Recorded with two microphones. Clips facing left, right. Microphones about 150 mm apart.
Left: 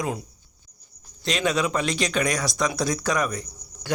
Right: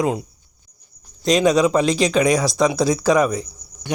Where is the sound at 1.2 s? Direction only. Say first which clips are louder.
Right 9 dB; 40° right (ahead or behind).